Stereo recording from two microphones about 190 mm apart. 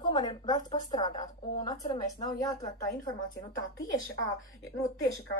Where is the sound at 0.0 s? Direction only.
20° left (ahead or behind).